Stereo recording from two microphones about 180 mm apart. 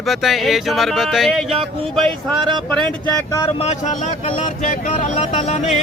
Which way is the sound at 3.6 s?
40° left (ahead or behind).